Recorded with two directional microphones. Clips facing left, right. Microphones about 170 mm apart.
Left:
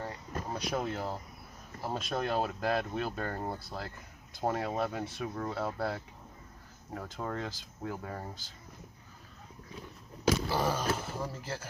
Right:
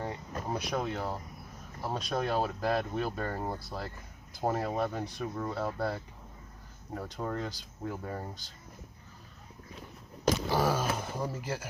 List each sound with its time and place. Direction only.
0.0 s a sound: 20° right (ahead or behind)
0.7 s speech: 5° left (ahead or behind)
10.6 s speech: 10° right (ahead or behind)